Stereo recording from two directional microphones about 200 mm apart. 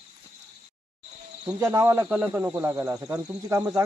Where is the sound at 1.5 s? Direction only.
10° right (ahead or behind).